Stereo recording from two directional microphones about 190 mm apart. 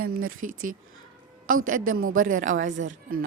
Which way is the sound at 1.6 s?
45° right (ahead or behind).